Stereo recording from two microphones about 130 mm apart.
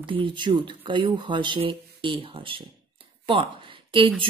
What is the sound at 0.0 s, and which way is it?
Speech, 40° right (ahead or behind).